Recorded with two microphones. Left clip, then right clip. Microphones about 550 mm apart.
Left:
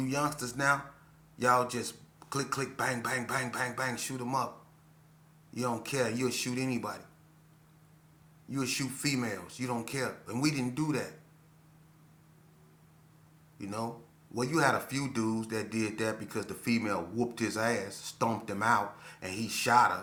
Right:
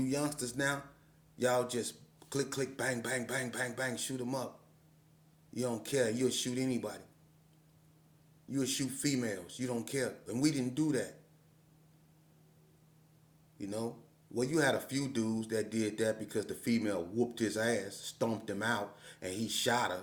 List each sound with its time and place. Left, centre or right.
0.0 s speech: right
5.5 s speech: right
8.4 s speech: right
13.6 s speech: right